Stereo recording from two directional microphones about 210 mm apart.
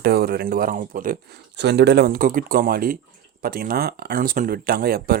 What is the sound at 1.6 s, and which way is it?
Speech, 55° right (ahead or behind).